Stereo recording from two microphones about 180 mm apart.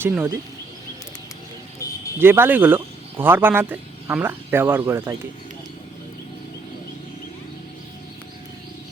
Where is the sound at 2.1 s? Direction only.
10° right (ahead or behind).